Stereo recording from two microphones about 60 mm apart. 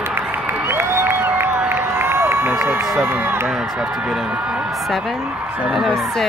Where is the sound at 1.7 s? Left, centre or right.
Right.